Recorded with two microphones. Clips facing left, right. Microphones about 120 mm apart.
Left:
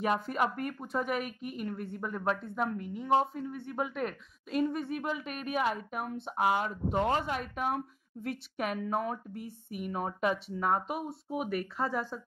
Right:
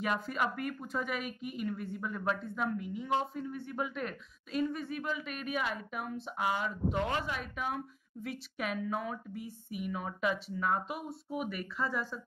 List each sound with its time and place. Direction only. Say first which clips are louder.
0.0 s a woman's voice: left 3 dB; 45° left (ahead or behind)
7.0 s a woman's voice: left 7 dB; 40° left (ahead or behind)